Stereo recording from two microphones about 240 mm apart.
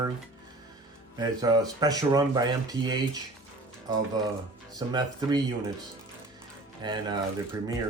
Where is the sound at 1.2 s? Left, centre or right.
Centre.